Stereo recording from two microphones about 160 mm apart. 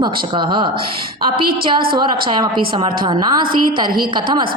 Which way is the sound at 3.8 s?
65° right (ahead or behind).